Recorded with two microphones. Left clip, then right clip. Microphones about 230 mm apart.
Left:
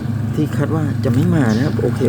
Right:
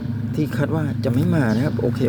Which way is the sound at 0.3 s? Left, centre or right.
Centre.